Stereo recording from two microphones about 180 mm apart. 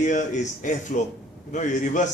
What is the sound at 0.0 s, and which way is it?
A man's voice, 45° left (ahead or behind).